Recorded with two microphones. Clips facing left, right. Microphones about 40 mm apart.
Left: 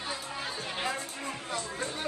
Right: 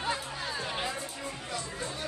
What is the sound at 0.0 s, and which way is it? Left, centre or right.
Chatter, right.